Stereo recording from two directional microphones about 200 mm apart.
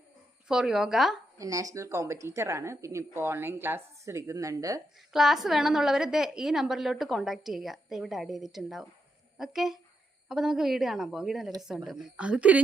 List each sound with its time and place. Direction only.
0.4 s a woman's voice: 5° right (ahead or behind)
1.4 s speech: 15° right (ahead or behind)
4.9 s a woman's voice: centre (ahead or behind)